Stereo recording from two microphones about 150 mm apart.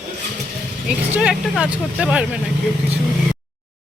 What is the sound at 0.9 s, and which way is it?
Speech, 5° right (ahead or behind).